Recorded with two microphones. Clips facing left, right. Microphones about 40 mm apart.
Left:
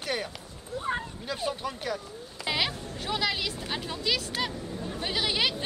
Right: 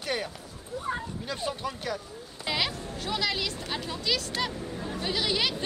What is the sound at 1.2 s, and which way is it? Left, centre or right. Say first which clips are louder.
Speech: even; centre.